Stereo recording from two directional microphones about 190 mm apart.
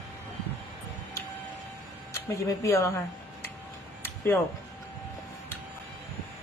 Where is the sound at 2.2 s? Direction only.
15° left (ahead or behind).